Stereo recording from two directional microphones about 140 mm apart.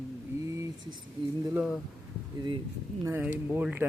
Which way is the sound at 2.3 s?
30° right (ahead or behind).